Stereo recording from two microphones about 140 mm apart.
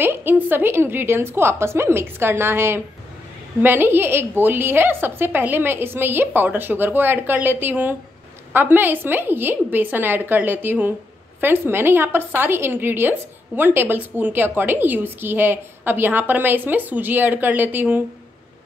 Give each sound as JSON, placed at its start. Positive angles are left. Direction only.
{"t": 0.0, "sound": "a woman's voice", "side_deg": -15}